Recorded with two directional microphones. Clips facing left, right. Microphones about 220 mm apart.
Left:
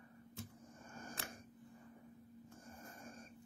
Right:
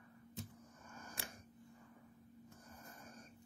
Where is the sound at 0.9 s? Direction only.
30° left (ahead or behind).